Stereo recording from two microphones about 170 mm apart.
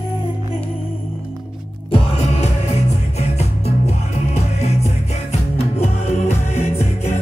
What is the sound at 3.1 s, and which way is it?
Music, 40° left (ahead or behind).